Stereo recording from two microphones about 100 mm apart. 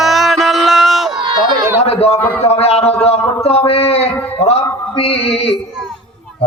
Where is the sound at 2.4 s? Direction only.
85° left.